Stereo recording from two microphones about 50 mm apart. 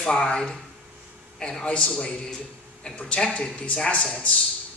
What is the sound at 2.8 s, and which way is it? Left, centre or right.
Speech, centre.